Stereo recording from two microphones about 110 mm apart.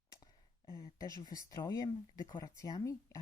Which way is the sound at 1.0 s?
35° left (ahead or behind).